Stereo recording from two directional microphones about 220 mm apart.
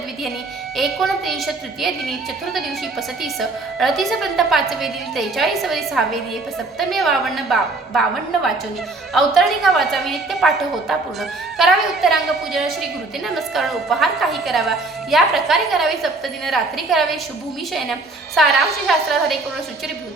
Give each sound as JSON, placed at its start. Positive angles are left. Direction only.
{"t": 0.8, "sound": "a woman's voice", "side_deg": 0}
{"t": 3.8, "sound": "a woman's voice", "side_deg": 0}
{"t": 18.4, "sound": "a woman's voice", "side_deg": 0}